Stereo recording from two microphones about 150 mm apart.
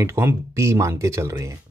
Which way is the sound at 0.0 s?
15° right (ahead or behind).